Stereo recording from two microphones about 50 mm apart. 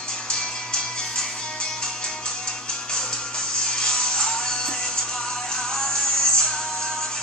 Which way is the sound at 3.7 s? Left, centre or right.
Centre.